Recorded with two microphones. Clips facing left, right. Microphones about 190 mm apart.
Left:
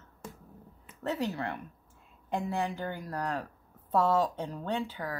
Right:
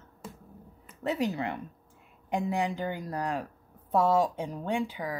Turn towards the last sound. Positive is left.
turn(degrees=-10)  # may be behind; listen again after turning